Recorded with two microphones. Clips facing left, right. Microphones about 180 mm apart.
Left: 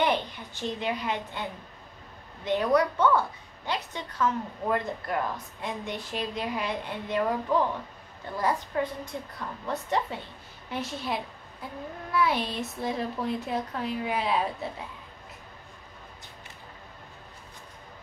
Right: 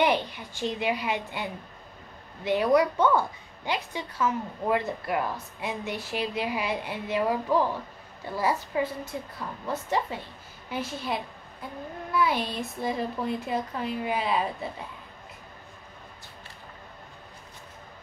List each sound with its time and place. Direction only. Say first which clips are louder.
0.0 s a woman's voice: right 2 dB; 10° right (ahead or behind)